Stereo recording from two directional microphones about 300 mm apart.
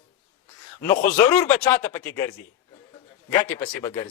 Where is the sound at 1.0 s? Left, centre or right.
Centre.